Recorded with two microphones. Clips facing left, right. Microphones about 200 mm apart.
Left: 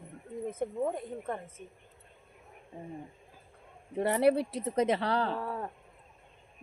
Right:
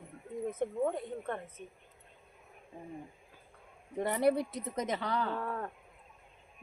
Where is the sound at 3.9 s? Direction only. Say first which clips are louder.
Left 3 dB; 70° left (ahead or behind).